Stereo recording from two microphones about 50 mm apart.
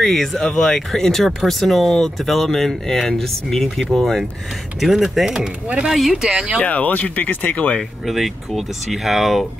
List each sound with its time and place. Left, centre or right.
0.0 s speech: centre
5.2 s speech: centre
5.9 s speech: centre
6.6 s speech: left
8.1 s speech: centre